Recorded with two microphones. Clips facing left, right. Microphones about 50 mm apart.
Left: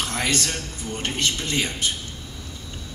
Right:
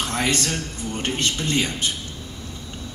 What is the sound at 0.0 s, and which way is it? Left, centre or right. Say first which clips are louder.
A man's voice: right 2 dB; right.